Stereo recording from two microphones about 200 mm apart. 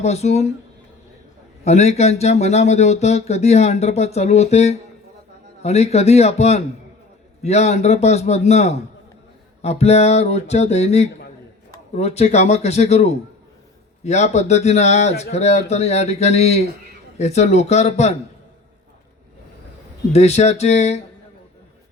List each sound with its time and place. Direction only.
0.0 s speech: 35° left (ahead or behind)
1.6 s speech: 35° left (ahead or behind)
20.1 s speech: 35° left (ahead or behind)